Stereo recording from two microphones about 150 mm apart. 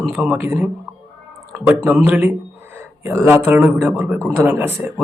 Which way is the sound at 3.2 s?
15° right (ahead or behind).